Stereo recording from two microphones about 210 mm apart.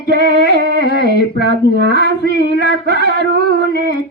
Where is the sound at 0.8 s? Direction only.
55° left (ahead or behind).